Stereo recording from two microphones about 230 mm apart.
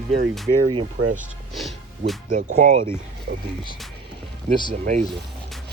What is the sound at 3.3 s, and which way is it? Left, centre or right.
Speech, right.